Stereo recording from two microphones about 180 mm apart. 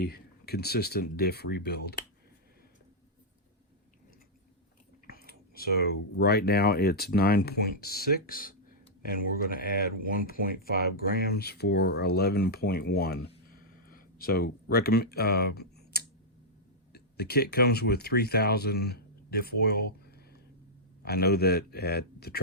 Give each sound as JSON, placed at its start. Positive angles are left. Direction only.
{"t": 0.0, "sound": "speech", "side_deg": 60}
{"t": 5.0, "sound": "speech", "side_deg": 55}
{"t": 13.5, "sound": "a sound", "side_deg": 50}
{"t": 16.9, "sound": "speech", "side_deg": 60}